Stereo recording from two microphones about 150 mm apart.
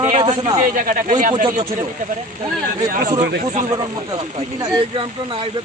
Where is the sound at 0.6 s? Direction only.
65° right (ahead or behind).